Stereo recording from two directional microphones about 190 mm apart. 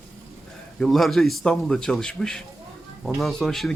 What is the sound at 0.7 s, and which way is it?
Speech, centre (ahead or behind).